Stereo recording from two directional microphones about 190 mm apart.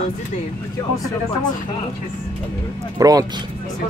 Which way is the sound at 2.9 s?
20° right (ahead or behind).